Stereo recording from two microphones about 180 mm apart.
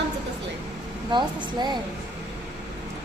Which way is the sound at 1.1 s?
25° right (ahead or behind).